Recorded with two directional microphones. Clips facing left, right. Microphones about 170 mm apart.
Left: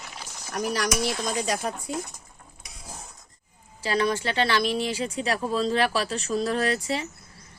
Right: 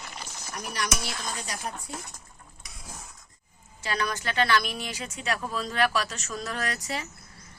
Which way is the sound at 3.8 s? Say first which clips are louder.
Left 6 dB; 30° left (ahead or behind).